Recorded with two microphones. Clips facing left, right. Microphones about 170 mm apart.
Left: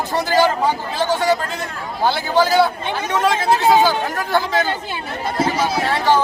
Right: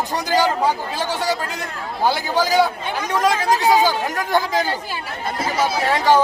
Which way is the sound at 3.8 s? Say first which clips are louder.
Left 2 dB; 15° right (ahead or behind).